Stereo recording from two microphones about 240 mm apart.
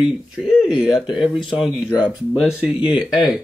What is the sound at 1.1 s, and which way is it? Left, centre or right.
Speech, left.